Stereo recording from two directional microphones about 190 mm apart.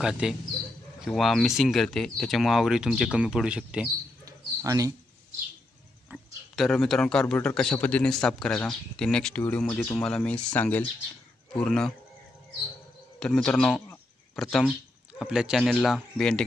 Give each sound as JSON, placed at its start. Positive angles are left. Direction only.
{"t": 0.0, "sound": "speech", "side_deg": -5}
{"t": 4.3, "sound": "bird", "side_deg": -15}
{"t": 6.0, "sound": "speech", "side_deg": -5}
{"t": 13.2, "sound": "speech", "side_deg": 5}